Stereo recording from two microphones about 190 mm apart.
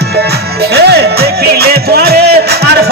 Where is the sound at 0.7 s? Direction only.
55° right (ahead or behind).